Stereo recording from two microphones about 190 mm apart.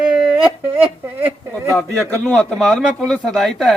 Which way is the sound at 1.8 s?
5° left (ahead or behind).